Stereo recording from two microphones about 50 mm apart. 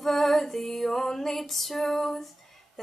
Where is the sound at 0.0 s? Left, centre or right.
Centre.